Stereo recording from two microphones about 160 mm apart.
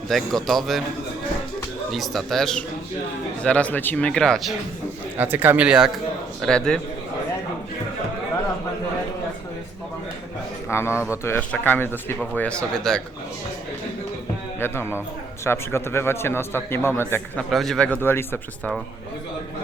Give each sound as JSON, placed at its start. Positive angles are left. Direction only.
{"t": 0.1, "sound": "speech", "side_deg": 0}
{"t": 1.9, "sound": "speech", "side_deg": 0}
{"t": 5.1, "sound": "speech", "side_deg": -10}
{"t": 10.7, "sound": "speech", "side_deg": 15}
{"t": 10.9, "sound": "speech", "side_deg": -10}
{"t": 11.2, "sound": "speech", "side_deg": 15}
{"t": 14.6, "sound": "speech", "side_deg": 15}
{"t": 17.5, "sound": "speech", "side_deg": 0}